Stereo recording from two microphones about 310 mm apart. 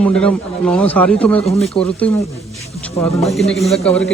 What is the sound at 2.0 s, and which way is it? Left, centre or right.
Speech, centre.